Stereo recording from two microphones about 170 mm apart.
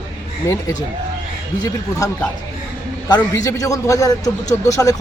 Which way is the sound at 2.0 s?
20° left (ahead or behind).